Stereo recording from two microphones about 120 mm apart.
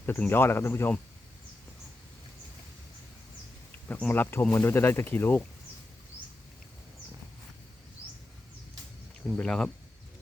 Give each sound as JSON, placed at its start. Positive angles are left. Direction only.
{"t": 0.0, "sound": "speech", "side_deg": 15}
{"t": 3.8, "sound": "speech", "side_deg": 15}
{"t": 9.3, "sound": "speech", "side_deg": 5}